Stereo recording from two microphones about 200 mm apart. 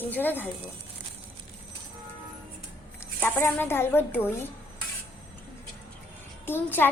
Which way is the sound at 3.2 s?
10° left (ahead or behind).